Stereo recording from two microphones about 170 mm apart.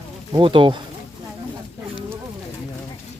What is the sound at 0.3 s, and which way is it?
Speech, 30° right (ahead or behind).